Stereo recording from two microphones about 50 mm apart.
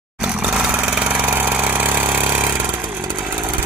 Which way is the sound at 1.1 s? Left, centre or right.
Right.